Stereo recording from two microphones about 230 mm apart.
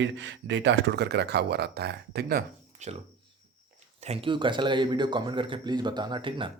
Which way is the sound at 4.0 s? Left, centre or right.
Right.